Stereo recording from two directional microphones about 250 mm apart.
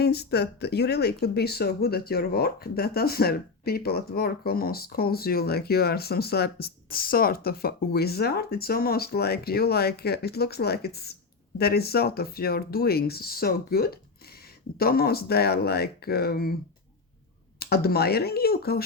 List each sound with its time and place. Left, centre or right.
0.0 s speech: left
17.6 s speech: left